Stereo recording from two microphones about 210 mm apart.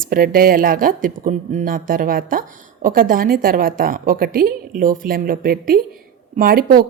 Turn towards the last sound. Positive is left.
turn(degrees=-45)  # may be behind; listen again after turning